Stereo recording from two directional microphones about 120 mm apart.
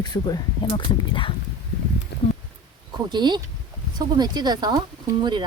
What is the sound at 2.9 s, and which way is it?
Speech, 40° right (ahead or behind).